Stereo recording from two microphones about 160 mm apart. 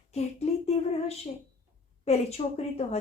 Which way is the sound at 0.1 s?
40° left (ahead or behind).